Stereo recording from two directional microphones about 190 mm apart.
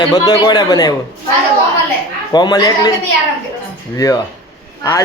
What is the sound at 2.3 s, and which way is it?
Speech, 20° left (ahead or behind).